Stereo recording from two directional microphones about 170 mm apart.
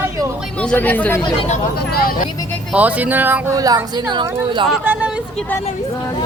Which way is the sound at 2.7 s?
10° right (ahead or behind).